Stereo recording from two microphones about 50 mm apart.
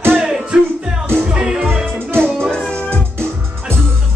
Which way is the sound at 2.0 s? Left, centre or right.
Right.